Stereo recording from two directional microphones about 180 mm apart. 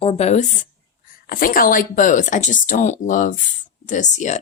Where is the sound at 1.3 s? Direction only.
50° left (ahead or behind).